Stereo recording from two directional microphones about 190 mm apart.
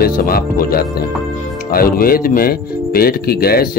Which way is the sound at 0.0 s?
50° left (ahead or behind).